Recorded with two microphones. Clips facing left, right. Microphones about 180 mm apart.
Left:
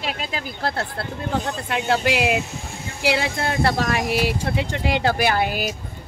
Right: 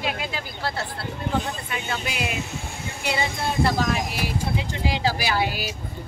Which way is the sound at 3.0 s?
85° left.